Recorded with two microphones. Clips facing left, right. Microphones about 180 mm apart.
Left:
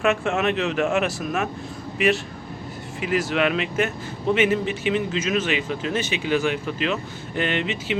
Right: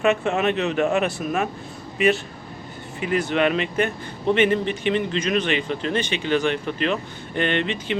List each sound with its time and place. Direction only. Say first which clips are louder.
0.0 s a man's voice: right 1 dB; centre (ahead or behind)